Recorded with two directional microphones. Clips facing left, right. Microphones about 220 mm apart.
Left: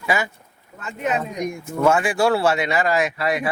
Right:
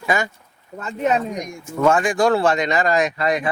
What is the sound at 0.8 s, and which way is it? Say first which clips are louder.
Speech: right 4 dB; 35° right (ahead or behind).